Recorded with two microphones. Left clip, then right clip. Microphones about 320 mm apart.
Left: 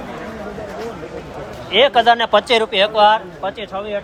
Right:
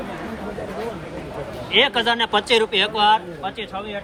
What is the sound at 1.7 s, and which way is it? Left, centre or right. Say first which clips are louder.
Speech: left 6 dB; left.